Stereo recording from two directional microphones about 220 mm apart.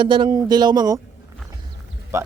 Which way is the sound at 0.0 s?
20° right (ahead or behind).